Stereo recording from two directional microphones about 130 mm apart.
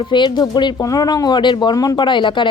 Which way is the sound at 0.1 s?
35° left (ahead or behind).